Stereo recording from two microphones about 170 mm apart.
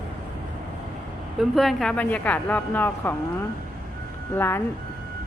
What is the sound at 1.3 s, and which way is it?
Speech, centre (ahead or behind).